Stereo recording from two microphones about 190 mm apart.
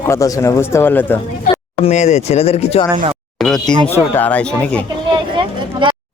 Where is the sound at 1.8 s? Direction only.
35° left (ahead or behind).